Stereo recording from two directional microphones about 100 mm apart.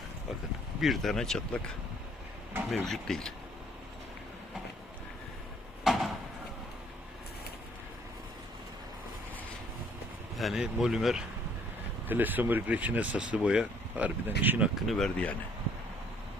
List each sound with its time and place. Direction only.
0.8 s speech: centre (ahead or behind)
2.8 s speech: 5° left (ahead or behind)
5.8 s a sound: centre (ahead or behind)
10.3 s speech: centre (ahead or behind)
12.0 s speech: 20° right (ahead or behind)
14.8 s speech: centre (ahead or behind)